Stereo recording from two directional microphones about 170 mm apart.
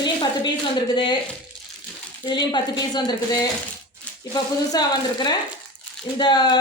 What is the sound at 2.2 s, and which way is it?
Speech, 25° left (ahead or behind).